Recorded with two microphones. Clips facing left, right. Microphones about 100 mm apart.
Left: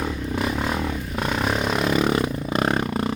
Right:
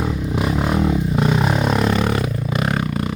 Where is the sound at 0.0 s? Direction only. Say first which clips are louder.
Right 3 dB; 15° right (ahead or behind).